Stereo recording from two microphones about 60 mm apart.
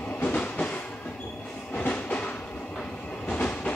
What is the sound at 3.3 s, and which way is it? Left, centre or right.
Train, left.